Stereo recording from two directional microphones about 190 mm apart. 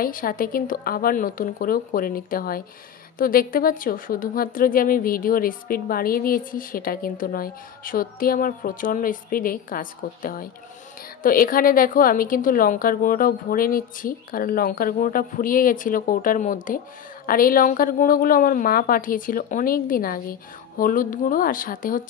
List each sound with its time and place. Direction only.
0.0 s a woman's voice: 50° left (ahead or behind)